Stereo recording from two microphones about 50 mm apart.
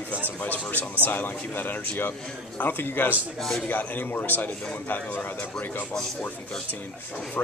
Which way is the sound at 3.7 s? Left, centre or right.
Left.